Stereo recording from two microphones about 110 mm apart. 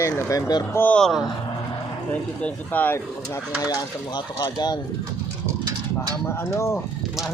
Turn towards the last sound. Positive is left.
turn(degrees=25)  # may be behind; listen again after turning